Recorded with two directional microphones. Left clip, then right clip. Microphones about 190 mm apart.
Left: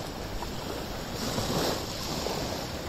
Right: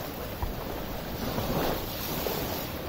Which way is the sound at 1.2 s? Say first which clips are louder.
Even; 40° left (ahead or behind).